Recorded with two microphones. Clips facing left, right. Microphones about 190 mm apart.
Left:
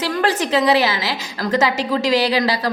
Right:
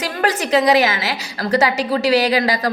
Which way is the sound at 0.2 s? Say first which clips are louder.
Right 2 dB; 40° right (ahead or behind).